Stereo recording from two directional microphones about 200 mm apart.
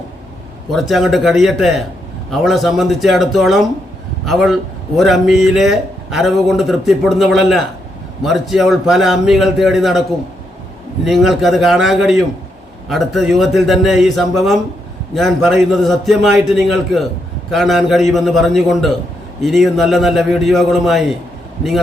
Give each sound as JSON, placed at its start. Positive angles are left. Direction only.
{"t": 0.7, "sound": "a man's voice", "side_deg": 0}
{"t": 11.0, "sound": "a man's voice", "side_deg": 0}